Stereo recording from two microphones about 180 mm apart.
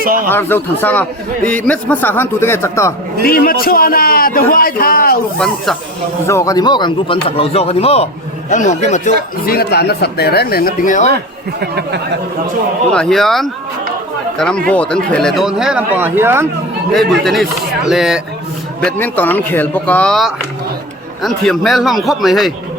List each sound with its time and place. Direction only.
0.3 s speech: 10° left (ahead or behind)
3.2 s a man's voice: 55° left (ahead or behind)
6.2 s speech: 15° left (ahead or behind); by 9.6 s 40° left (ahead or behind)
9.6 s a man's voice: 65° left (ahead or behind); by 11.1 s 45° left (ahead or behind)
11.6 s speech: 65° right (ahead or behind)
12.9 s speech: 5° left (ahead or behind); by 16.5 s 15° right (ahead or behind)
17.1 s speech: centre (ahead or behind)
18.8 s speech: 5° left (ahead or behind)